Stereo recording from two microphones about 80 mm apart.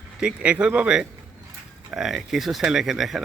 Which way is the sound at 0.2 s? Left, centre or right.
Centre.